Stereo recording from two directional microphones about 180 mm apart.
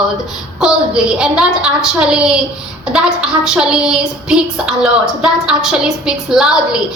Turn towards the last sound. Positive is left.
turn(degrees=-5)  # may be behind; listen again after turning